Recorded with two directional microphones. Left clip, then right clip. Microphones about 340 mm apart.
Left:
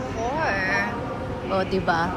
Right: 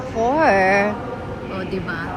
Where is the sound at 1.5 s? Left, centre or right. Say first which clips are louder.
Left 5 dB; centre.